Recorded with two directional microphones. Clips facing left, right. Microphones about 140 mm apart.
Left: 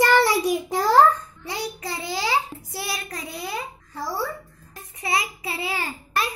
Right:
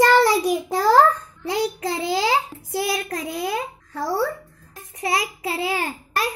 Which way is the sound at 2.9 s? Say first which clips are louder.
Right 7 dB; 50° right (ahead or behind).